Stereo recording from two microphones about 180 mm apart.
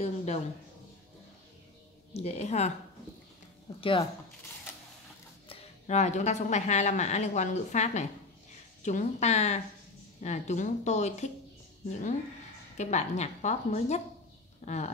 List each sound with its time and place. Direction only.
0.0 s speech: 35° left (ahead or behind)
2.1 s speech: 35° left (ahead or behind)
3.8 s speech: 30° left (ahead or behind)
5.5 s speech: 40° left (ahead or behind)
12.7 s speech: 40° left (ahead or behind)